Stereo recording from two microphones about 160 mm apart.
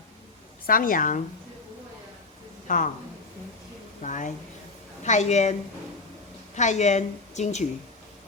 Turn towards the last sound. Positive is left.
turn(degrees=45)  # may be behind; listen again after turning